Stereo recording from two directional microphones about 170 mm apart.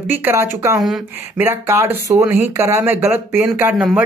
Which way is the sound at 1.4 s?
15° right (ahead or behind).